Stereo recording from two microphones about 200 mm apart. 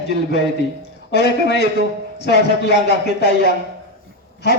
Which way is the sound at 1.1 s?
55° left (ahead or behind).